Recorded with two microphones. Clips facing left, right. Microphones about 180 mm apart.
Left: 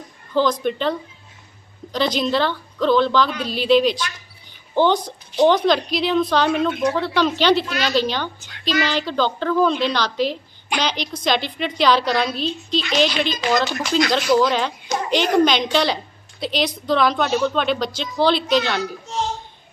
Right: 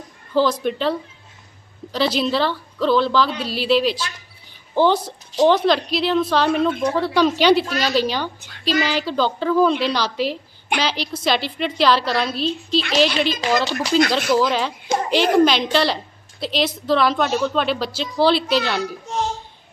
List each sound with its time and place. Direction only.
0.3 s a woman's voice: 5° right (ahead or behind)
7.6 s a woman's voice: 40° right (ahead or behind)
7.9 s a woman's voice: 10° right (ahead or behind)